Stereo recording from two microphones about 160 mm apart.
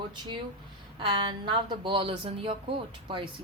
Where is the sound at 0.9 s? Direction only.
30° right (ahead or behind).